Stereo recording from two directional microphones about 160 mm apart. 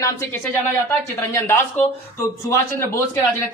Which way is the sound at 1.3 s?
15° left (ahead or behind).